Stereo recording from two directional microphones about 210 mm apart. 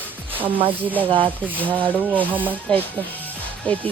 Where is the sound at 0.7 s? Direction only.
10° right (ahead or behind).